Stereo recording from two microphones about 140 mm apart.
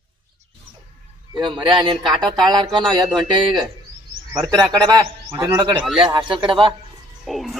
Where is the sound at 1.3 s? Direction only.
35° right (ahead or behind).